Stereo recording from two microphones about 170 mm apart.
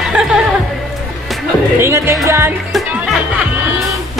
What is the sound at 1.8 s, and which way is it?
Music, 15° right (ahead or behind).